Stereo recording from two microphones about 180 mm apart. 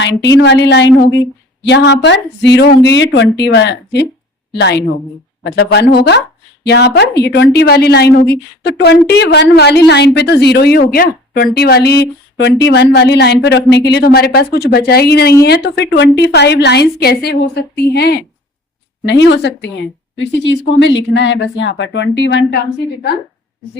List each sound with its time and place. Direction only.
0.0 s speech: 75° left (ahead or behind)
19.0 s speech: 75° left (ahead or behind)